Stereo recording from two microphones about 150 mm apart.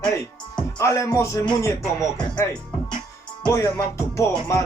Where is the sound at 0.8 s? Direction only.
20° left (ahead or behind).